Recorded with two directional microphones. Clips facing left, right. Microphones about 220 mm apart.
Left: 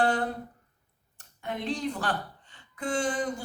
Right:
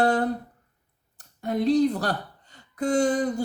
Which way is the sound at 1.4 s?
40° right (ahead or behind).